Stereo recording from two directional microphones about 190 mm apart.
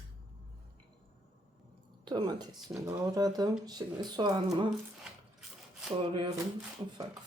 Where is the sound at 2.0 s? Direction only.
20° right (ahead or behind).